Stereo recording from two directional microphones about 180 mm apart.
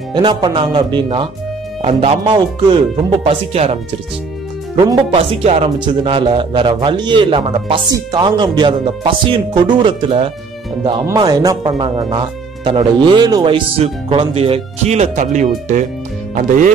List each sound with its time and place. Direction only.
0.1 s a man's voice: 25° right (ahead or behind)
4.7 s a man's voice: 25° right (ahead or behind); by 16.7 s 45° right (ahead or behind)